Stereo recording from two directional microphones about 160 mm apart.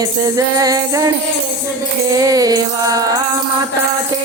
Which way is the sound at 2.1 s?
20° right (ahead or behind).